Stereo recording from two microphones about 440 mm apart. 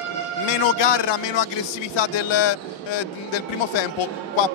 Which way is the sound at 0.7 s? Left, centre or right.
Left.